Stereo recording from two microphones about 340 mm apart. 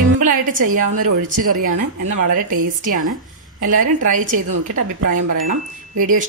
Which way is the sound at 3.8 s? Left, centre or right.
Right.